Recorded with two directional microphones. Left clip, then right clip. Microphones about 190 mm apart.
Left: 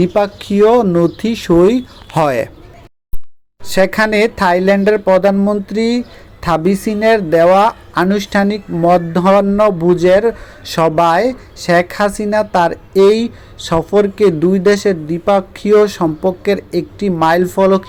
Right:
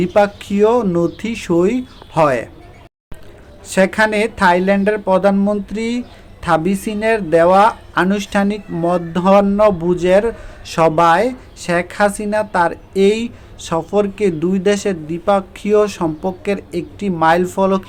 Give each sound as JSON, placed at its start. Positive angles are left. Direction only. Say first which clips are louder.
{"t": 0.0, "sound": "speech", "louder": "even", "side_deg": 15}
{"t": 2.1, "sound": "speech", "louder": "left 1 dB", "side_deg": 30}
{"t": 3.7, "sound": "speech", "louder": "left 2 dB", "side_deg": 20}